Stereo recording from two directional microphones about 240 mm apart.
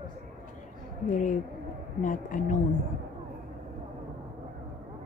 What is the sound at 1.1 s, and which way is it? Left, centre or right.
Speech, left.